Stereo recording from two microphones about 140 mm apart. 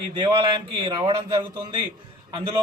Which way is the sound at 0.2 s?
35° right (ahead or behind).